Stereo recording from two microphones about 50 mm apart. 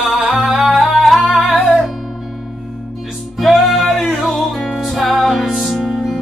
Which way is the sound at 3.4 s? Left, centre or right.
Centre.